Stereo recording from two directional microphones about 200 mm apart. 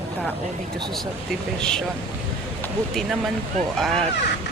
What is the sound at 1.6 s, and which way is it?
Speech, 5° left (ahead or behind).